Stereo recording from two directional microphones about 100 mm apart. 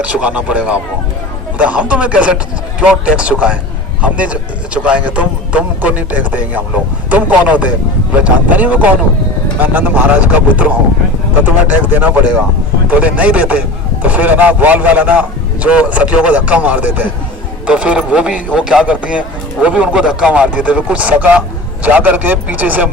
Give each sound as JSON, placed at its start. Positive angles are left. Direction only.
{"t": 0.0, "sound": "a man's voice", "side_deg": -15}
{"t": 11.7, "sound": "a man's voice", "side_deg": -15}